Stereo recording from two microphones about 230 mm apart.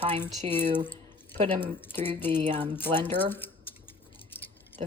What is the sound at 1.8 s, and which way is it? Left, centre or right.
Speech, centre.